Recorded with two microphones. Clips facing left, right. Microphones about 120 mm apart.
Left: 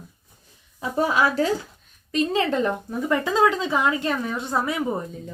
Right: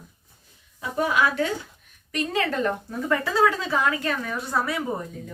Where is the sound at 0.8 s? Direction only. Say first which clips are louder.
Left 2 dB; 30° left (ahead or behind).